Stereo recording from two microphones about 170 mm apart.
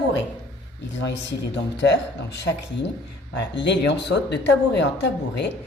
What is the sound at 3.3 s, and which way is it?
A woman's voice, 90° left.